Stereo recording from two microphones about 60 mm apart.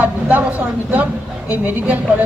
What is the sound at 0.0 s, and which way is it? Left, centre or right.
A woman's voice, right.